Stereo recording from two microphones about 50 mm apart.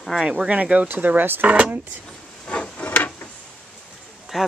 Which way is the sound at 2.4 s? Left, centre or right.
Left.